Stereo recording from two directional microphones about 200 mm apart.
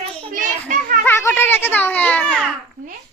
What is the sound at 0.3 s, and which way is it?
Children playing, 40° right (ahead or behind).